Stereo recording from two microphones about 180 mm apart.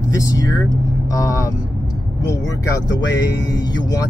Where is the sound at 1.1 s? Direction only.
20° left (ahead or behind).